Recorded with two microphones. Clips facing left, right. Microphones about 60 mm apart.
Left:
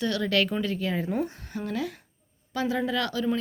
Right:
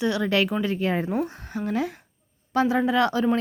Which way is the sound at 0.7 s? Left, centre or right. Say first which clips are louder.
Right 3 dB; right.